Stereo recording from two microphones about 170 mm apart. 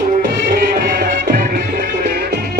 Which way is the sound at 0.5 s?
65° right (ahead or behind).